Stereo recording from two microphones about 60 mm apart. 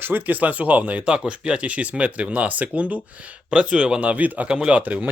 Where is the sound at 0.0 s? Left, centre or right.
Right; by 4.1 s centre.